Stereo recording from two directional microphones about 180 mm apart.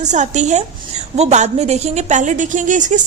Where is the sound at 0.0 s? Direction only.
40° right (ahead or behind).